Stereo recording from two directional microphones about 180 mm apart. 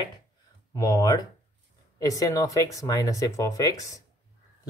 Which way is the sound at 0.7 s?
20° left (ahead or behind).